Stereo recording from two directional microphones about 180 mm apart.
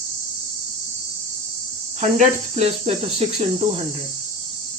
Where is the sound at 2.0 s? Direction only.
40° right (ahead or behind).